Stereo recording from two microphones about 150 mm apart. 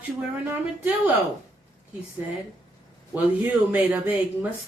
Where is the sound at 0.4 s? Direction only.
10° right (ahead or behind).